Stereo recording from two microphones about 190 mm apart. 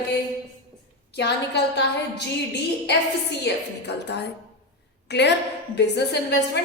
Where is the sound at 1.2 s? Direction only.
65° left (ahead or behind).